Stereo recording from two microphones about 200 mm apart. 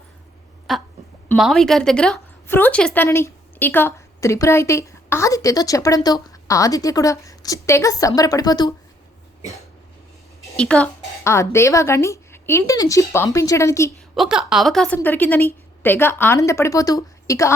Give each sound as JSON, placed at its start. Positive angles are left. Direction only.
{"t": 0.7, "sound": "a sound", "side_deg": 0}
{"t": 1.4, "sound": "speech", "side_deg": 0}
{"t": 10.6, "sound": "speech", "side_deg": 5}
{"t": 14.2, "sound": "speech", "side_deg": -5}